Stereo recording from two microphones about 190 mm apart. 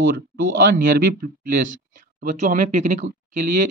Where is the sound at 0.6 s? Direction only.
50° right (ahead or behind).